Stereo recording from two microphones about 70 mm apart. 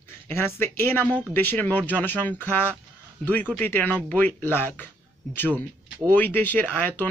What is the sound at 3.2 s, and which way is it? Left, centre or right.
A man's voice, centre.